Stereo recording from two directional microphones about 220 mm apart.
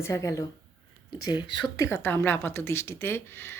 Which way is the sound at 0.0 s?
15° left (ahead or behind).